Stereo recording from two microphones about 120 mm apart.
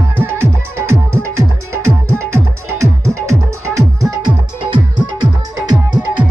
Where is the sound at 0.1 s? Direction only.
20° right (ahead or behind).